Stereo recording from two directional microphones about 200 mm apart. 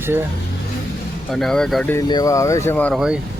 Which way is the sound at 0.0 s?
10° right (ahead or behind).